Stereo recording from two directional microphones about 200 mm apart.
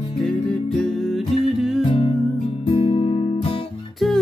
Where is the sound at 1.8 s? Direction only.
25° left (ahead or behind).